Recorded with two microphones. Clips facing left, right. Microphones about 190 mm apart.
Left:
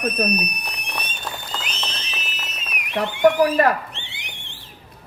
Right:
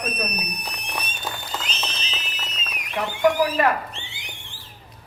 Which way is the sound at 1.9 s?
65° left (ahead or behind).